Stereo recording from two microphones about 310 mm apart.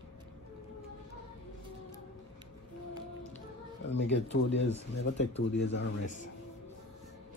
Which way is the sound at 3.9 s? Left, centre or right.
Left.